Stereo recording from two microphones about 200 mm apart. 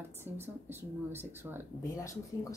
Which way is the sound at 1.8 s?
15° left (ahead or behind).